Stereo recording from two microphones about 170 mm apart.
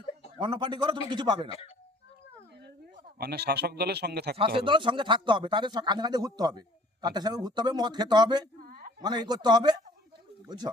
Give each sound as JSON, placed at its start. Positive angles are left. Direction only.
{"t": 0.3, "sound": "speech", "side_deg": -30}
{"t": 3.2, "sound": "speech", "side_deg": -70}
{"t": 4.4, "sound": "speech", "side_deg": -30}
{"t": 8.6, "sound": "a sound", "side_deg": -60}
{"t": 9.0, "sound": "speech", "side_deg": -25}